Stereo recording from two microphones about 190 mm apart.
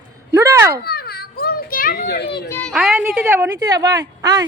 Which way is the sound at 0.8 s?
55° left (ahead or behind).